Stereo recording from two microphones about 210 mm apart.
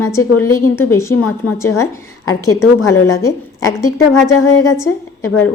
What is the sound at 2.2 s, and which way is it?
Speech, 90° left.